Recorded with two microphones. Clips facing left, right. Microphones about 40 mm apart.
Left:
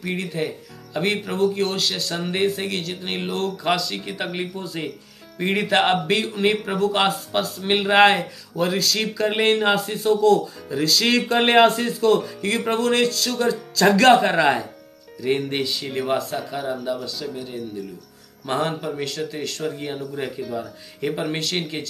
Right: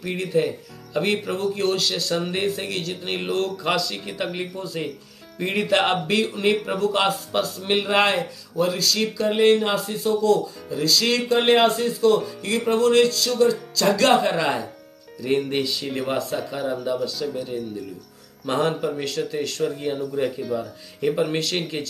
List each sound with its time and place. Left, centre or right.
0.0 s speech: centre; by 9.0 s left
9.2 s speech: left
9.5 s speech: left
10.8 s speech: left
11.2 s speech: left
12.4 s speech: left
15.2 s speech: centre
18.4 s speech: centre
19.8 s speech: centre
20.3 s speech: centre
21.0 s speech: centre
21.4 s speech: centre